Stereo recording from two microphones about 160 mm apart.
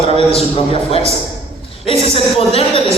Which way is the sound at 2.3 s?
40° left (ahead or behind).